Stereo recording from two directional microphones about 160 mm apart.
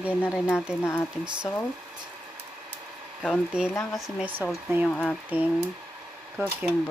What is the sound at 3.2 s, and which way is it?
Speech, 5° right (ahead or behind).